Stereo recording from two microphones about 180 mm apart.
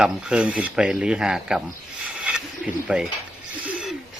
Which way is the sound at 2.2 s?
5° right (ahead or behind).